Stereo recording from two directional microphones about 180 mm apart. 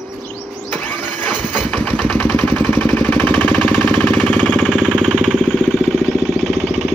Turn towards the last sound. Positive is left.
turn(degrees=10)  # may be behind; listen again after turning